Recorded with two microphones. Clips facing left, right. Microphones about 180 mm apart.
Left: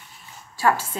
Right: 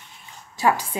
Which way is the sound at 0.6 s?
15° right (ahead or behind).